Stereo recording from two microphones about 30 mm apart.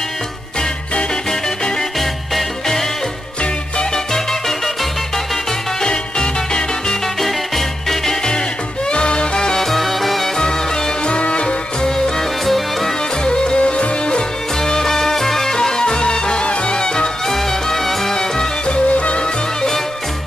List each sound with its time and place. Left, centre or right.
3.9 s music: centre
5.9 s music: left
7.2 s music: centre
8.8 s music: left
9.6 s music: centre
10.3 s music: left
11.1 s music: left
12.2 s music: centre
13.2 s music: left
13.6 s music: left
14.6 s music: centre
15.5 s music: left
17.4 s music: centre
18.7 s yodeling: left